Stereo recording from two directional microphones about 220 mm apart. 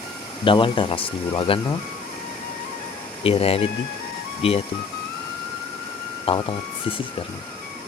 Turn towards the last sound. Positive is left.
turn(degrees=25)  # may be behind; listen again after turning